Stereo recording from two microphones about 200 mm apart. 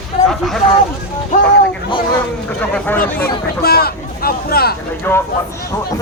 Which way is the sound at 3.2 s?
50° left (ahead or behind).